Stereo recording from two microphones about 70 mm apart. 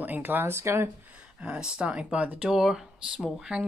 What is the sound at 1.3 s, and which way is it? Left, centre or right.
Speech, centre.